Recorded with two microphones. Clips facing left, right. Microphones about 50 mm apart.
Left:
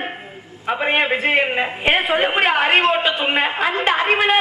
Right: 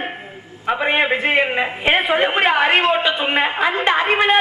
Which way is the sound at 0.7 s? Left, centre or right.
Centre.